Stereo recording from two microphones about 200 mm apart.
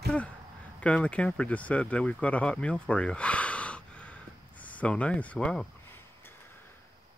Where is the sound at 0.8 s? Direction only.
5° left (ahead or behind).